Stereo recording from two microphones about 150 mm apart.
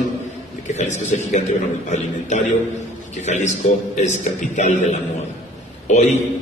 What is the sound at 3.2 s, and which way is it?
A man's voice, 50° left (ahead or behind).